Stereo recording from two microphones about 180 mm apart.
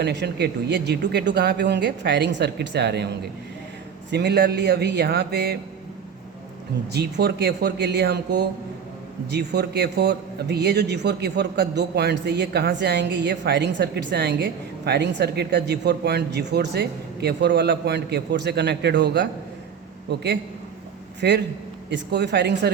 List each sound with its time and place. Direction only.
0.0 s a man's voice: 70° right (ahead or behind)
4.1 s a man's voice: 70° right (ahead or behind)
6.9 s a man's voice: 65° right (ahead or behind)